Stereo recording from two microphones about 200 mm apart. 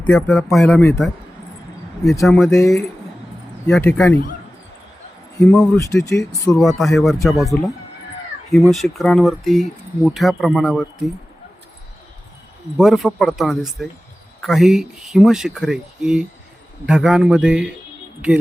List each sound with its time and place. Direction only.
0.1 s speech: centre (ahead or behind)
2.2 s speech: centre (ahead or behind)
3.7 s speech: 10° left (ahead or behind)
5.4 s speech: 10° left (ahead or behind)
6.6 s speech: centre (ahead or behind)
12.7 s speech: centre (ahead or behind)